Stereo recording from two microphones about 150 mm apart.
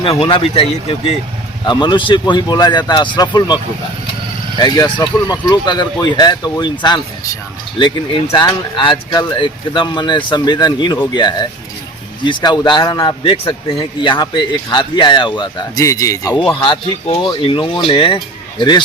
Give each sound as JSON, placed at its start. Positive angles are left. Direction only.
{"t": 0.0, "sound": "speech", "side_deg": 35}
{"t": 16.6, "sound": "speech", "side_deg": 35}